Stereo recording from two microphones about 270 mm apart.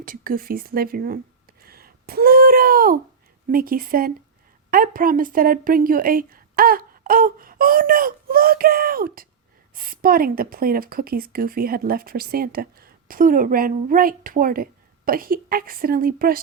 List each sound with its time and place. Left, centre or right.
0.0 s a woman's voice: right
1.6 s a sound: right
3.5 s a woman's voice: right